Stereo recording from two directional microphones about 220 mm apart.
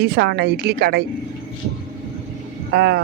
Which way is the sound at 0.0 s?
50° right (ahead or behind).